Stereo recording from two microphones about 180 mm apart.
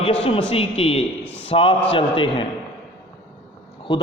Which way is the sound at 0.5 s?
35° left (ahead or behind).